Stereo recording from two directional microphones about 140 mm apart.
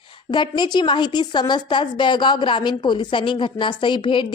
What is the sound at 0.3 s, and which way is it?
A woman's voice, 30° left (ahead or behind).